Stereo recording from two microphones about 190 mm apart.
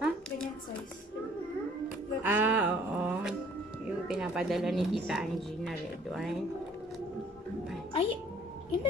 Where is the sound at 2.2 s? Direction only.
10° right (ahead or behind).